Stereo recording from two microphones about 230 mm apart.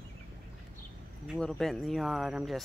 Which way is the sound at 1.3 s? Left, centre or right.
Centre.